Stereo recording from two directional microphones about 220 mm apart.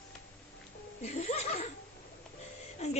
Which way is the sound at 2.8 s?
30° left (ahead or behind).